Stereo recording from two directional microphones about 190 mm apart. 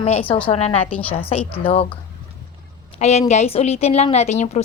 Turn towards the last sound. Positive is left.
turn(degrees=35)  # may be behind; listen again after turning